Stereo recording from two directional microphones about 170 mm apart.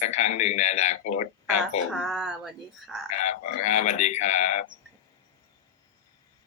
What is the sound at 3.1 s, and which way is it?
Speech, 40° left (ahead or behind).